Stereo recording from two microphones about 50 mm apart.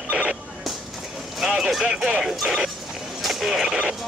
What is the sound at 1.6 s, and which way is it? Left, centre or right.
Speech, centre.